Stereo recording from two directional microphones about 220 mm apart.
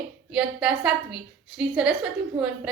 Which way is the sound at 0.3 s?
5° right (ahead or behind).